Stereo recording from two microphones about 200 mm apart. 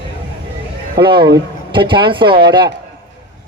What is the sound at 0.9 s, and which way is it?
A man's voice, 25° right (ahead or behind).